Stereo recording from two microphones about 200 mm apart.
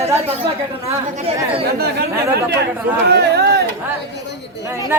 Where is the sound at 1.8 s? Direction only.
50° right (ahead or behind).